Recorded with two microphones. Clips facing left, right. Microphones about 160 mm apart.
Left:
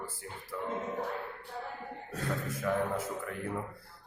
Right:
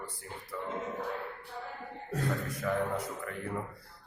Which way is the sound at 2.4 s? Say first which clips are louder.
Even; centre (ahead or behind).